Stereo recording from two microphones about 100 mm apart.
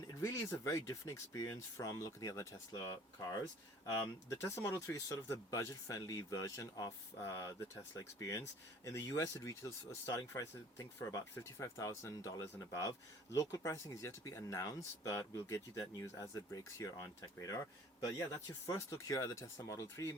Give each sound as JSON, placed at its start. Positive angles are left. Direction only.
{"t": 0.2, "sound": "speech", "side_deg": 30}
{"t": 8.2, "sound": "speech", "side_deg": 30}
{"t": 18.7, "sound": "speech", "side_deg": 35}